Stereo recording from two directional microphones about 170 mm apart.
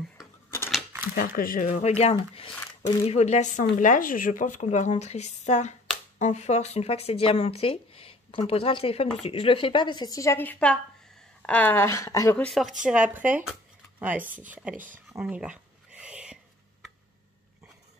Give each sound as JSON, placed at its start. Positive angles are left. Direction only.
{"t": 1.1, "sound": "a woman's voice", "side_deg": 55}
{"t": 1.9, "sound": "speech", "side_deg": 35}
{"t": 2.6, "sound": "a sound", "side_deg": 20}
{"t": 3.1, "sound": "a woman's voice", "side_deg": 40}
{"t": 12.4, "sound": "speech", "side_deg": 0}
{"t": 15.1, "sound": "a sound", "side_deg": -5}